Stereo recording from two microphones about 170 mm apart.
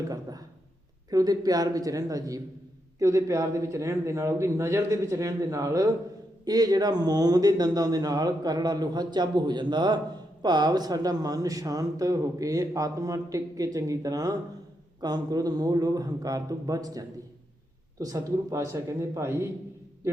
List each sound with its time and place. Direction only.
0.1 s a man's voice: 20° right (ahead or behind)